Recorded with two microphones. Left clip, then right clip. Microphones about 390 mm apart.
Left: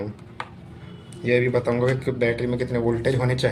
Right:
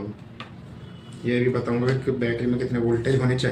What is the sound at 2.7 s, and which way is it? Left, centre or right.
Speech, left.